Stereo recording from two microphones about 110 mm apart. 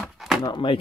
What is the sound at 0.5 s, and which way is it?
Speech, 50° left (ahead or behind).